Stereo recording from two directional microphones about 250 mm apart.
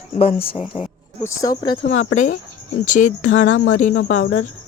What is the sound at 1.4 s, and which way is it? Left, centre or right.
Speech, centre.